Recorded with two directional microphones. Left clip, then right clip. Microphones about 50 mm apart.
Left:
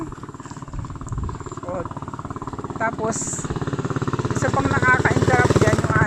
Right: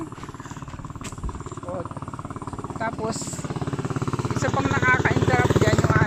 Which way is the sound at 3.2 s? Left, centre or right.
Centre.